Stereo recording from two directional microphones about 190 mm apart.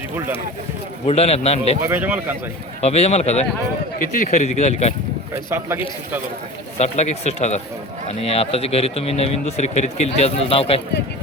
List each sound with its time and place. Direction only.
1.0 s speech: 30° left (ahead or behind)
1.8 s speech: 10° right (ahead or behind)
2.8 s speech: 35° left (ahead or behind)
5.5 s speech: 15° right (ahead or behind)
6.7 s speech: 35° left (ahead or behind)